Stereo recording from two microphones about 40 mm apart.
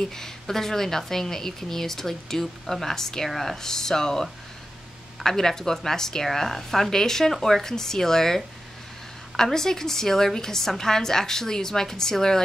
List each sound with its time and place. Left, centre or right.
0.0 s a woman's voice: centre
9.4 s a woman's voice: centre